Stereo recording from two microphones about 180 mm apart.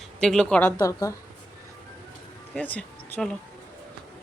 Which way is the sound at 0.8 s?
20° left (ahead or behind).